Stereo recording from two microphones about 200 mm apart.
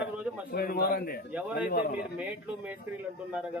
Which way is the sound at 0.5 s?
50° left (ahead or behind).